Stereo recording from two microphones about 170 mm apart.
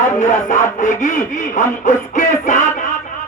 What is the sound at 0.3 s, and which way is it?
Speech, 50° left (ahead or behind).